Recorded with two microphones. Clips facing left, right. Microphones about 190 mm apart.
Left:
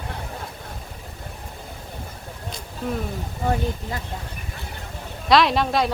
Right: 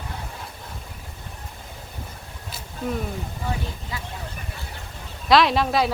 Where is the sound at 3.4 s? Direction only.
50° left (ahead or behind).